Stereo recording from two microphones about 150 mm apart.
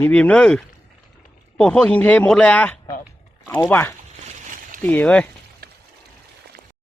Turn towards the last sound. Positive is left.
turn(degrees=10)  # may be behind; listen again after turning